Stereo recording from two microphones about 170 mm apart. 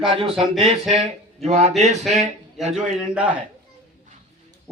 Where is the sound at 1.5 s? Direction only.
40° right (ahead or behind).